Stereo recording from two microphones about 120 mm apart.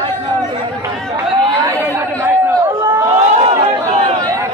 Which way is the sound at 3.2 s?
55° right (ahead or behind).